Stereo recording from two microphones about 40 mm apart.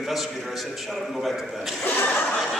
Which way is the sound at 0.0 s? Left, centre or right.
Centre.